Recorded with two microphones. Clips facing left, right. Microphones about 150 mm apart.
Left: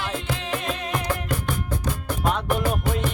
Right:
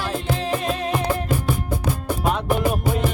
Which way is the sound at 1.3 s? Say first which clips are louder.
Right 4 dB; 10° right (ahead or behind).